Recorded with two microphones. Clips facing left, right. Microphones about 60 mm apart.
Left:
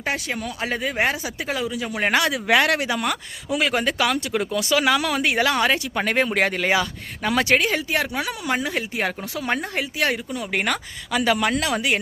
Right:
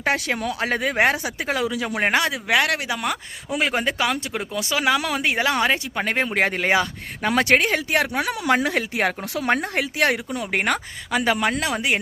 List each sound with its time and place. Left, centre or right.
0.0 s speech: right
1.6 s speech: right
2.0 s a woman's voice: right
2.5 s speech: centre
3.6 s speech: right
10.5 s a woman's voice: right